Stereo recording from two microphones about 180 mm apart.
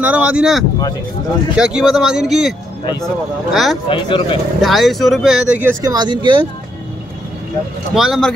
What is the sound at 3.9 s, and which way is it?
Speech, 30° left (ahead or behind).